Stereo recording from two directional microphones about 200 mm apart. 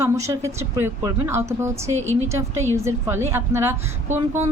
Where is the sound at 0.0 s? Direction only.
15° right (ahead or behind).